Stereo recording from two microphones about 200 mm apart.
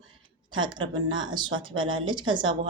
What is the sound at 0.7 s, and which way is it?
Speech, 25° right (ahead or behind).